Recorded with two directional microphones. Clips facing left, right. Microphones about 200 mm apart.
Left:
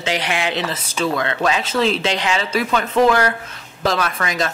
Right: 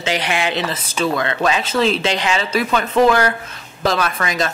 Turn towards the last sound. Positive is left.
turn(degrees=-15)  # may be behind; listen again after turning